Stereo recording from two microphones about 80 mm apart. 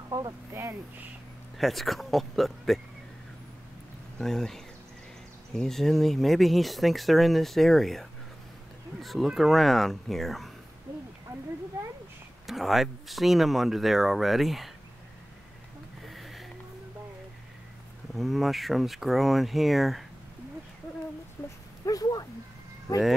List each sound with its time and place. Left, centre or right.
1.6 s speech: centre
4.2 s speech: centre
12.4 s speech: centre
16.1 s music: centre
18.1 s speech: centre
21.4 s speech: centre
21.8 s speech: left